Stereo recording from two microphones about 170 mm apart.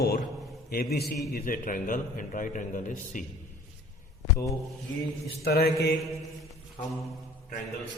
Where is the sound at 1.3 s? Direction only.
55° left (ahead or behind).